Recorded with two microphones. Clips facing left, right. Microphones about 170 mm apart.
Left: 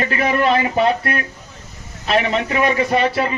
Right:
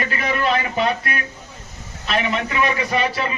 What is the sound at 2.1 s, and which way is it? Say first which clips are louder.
Speech: left 4 dB; 35° left (ahead or behind).